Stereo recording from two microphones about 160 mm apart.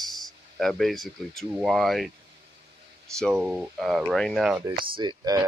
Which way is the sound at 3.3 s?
5° right (ahead or behind).